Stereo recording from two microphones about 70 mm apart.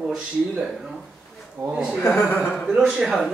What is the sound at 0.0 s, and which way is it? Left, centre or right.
Speech, centre.